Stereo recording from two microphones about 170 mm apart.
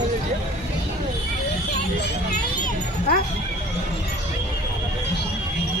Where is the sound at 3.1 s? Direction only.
65° left (ahead or behind).